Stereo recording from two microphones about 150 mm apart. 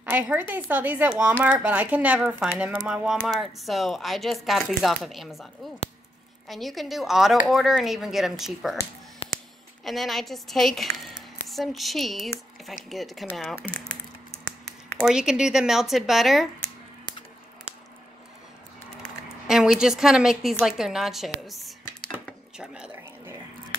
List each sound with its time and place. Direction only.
0.0 s speech: 10° right (ahead or behind)
6.5 s speech: centre (ahead or behind)
9.2 s a sound: 40° left (ahead or behind)
9.8 s speech: centre (ahead or behind)
15.0 s speech: 5° right (ahead or behind)
19.4 s a woman's voice: centre (ahead or behind)
21.5 s a sound: centre (ahead or behind)